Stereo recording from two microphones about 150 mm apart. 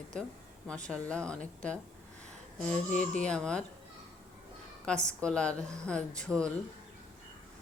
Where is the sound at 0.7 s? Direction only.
5° left (ahead or behind).